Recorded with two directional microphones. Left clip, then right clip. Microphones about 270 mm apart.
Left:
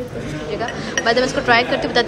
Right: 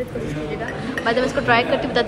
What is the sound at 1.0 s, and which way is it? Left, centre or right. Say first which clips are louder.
Speech: left 3 dB; centre.